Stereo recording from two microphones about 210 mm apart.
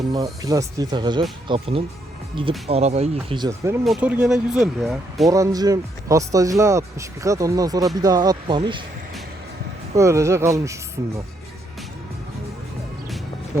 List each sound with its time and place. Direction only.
0.1 s speech: 15° right (ahead or behind)
3.8 s speech: 5° right (ahead or behind)
5.3 s speech: 15° right (ahead or behind)
9.9 s speech: 15° right (ahead or behind)